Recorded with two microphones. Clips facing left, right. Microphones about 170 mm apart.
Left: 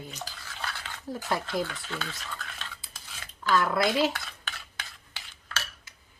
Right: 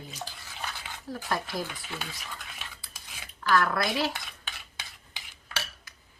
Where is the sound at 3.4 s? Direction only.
20° left (ahead or behind).